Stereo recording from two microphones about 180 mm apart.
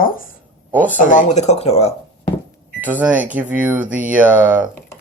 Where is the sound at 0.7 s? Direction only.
10° right (ahead or behind).